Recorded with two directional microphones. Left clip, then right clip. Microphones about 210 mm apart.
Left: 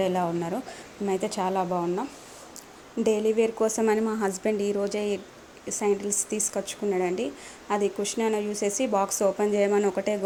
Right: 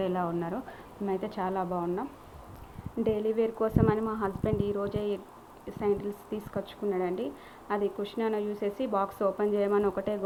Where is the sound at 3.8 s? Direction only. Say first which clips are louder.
Left 4 dB; 35° left (ahead or behind).